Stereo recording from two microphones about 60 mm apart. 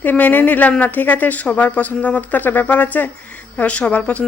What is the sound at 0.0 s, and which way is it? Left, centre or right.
Speech, left.